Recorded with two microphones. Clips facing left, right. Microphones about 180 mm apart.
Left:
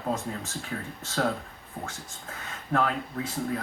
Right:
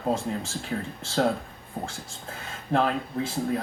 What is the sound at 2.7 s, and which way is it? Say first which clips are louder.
Speech: right 3 dB; 30° right (ahead or behind).